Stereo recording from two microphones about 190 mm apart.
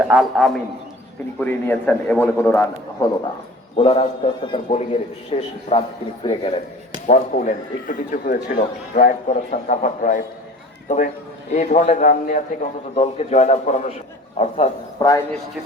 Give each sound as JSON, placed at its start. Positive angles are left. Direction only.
{"t": 0.0, "sound": "a man's voice", "side_deg": -5}
{"t": 3.8, "sound": "a man's voice", "side_deg": 30}
{"t": 7.1, "sound": "a man's voice", "side_deg": 40}